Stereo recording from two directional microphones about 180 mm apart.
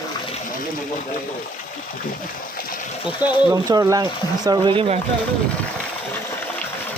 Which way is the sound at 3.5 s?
20° right (ahead or behind).